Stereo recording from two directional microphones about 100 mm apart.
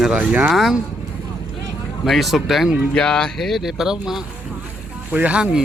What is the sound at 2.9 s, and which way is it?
Speech, 10° left (ahead or behind).